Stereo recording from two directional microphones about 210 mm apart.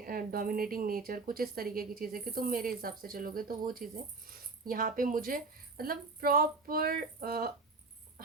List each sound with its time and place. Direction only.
0.0 s a woman's voice: 45° right (ahead or behind)